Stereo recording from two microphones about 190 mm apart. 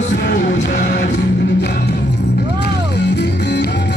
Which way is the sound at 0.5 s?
40° left (ahead or behind).